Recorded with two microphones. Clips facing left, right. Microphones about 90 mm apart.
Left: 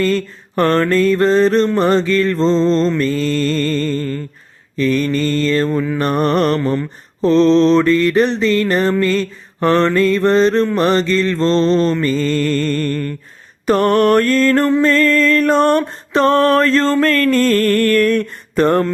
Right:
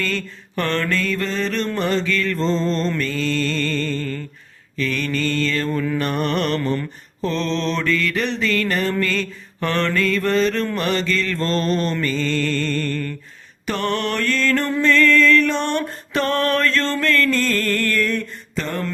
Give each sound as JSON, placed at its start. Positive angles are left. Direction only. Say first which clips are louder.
{"t": 0.0, "sound": "mantra", "louder": "left 9 dB", "side_deg": 40}
{"t": 5.7, "sound": "mantra", "louder": "left 4 dB", "side_deg": 15}
{"t": 6.0, "sound": "mantra", "louder": "left 6 dB", "side_deg": 40}
{"t": 15.8, "sound": "mantra", "louder": "left 8 dB", "side_deg": 30}